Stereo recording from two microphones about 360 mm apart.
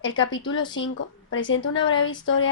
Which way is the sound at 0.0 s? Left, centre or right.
Left.